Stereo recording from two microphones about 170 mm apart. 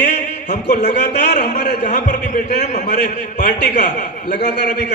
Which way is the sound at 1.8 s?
45° left (ahead or behind).